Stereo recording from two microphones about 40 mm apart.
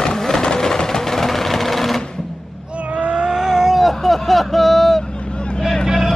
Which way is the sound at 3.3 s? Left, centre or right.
Centre.